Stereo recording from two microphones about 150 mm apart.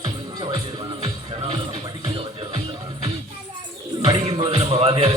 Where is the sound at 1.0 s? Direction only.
35° right (ahead or behind).